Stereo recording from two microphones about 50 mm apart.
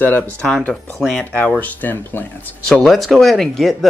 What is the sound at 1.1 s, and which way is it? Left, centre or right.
Speech, left.